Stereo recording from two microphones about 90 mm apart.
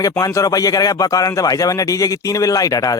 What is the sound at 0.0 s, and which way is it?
Speech, 40° left (ahead or behind).